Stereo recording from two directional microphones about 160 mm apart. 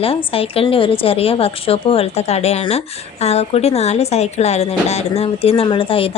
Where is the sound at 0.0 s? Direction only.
35° left (ahead or behind).